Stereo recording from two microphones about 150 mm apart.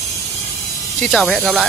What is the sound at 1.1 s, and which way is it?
Speech, centre (ahead or behind).